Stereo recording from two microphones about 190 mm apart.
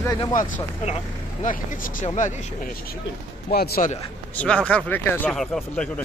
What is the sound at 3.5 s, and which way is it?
Speech, 55° left (ahead or behind).